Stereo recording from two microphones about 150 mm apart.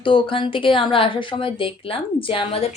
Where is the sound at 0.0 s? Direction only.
35° left (ahead or behind).